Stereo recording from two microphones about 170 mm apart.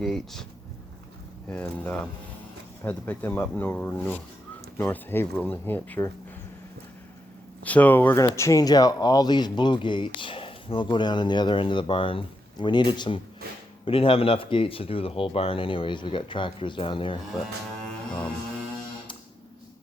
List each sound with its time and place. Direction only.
0.0 s speech: centre (ahead or behind)
1.5 s speech: 5° left (ahead or behind)
7.6 s speech: 10° left (ahead or behind); by 17.2 s 30° left (ahead or behind)